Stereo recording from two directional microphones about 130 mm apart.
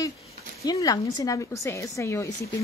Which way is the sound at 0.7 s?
25° left (ahead or behind).